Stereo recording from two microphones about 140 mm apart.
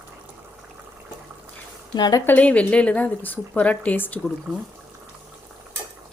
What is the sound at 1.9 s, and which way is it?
Speech, 30° left (ahead or behind).